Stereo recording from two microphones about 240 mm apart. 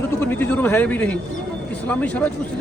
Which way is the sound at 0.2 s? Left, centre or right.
Centre.